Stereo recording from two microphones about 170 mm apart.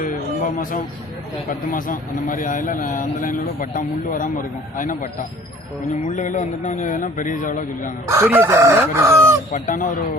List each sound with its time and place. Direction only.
0.0 s music: 50° left (ahead or behind)
1.5 s a man's voice: 50° left (ahead or behind)
6.1 s a man's voice: 50° left (ahead or behind)
8.0 s chicken: 15° right (ahead or behind)
9.5 s a man's voice: 50° left (ahead or behind)